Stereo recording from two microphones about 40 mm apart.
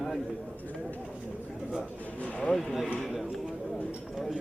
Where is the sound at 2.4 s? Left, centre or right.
Centre.